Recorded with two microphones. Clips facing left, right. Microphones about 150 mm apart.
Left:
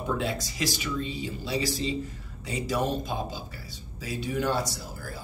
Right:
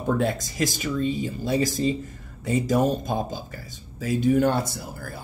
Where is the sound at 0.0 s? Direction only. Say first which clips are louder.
Right 5 dB; 45° right (ahead or behind).